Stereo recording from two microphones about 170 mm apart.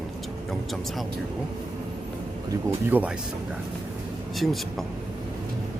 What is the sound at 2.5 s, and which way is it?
Speech, 15° right (ahead or behind).